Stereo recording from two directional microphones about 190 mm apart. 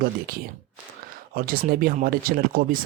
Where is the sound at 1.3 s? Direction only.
50° right (ahead or behind).